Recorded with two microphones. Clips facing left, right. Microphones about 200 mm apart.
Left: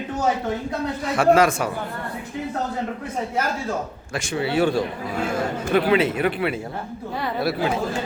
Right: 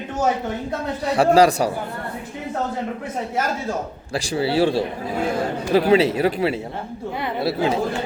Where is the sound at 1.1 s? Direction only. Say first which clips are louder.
Right 2 dB; 35° right (ahead or behind).